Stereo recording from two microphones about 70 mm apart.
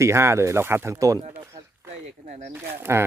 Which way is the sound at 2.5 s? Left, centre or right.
Right.